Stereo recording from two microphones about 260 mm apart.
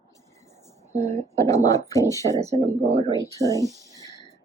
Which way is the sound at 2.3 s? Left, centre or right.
Centre.